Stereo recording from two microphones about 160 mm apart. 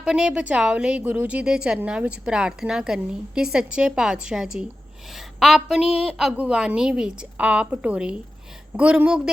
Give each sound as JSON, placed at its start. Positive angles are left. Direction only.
{"t": 0.0, "sound": "a woman's voice", "side_deg": -5}